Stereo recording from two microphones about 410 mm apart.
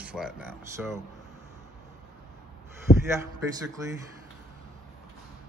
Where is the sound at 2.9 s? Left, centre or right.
Left.